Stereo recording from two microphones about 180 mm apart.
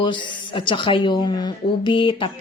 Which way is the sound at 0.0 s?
25° left (ahead or behind).